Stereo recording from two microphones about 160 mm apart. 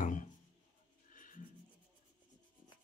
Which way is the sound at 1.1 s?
55° left (ahead or behind).